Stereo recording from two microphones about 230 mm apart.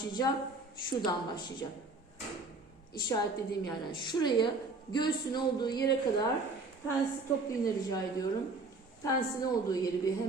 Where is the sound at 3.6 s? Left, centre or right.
Centre.